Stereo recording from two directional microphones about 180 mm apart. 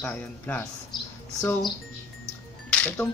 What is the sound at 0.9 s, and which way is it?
Mouse, 15° left (ahead or behind).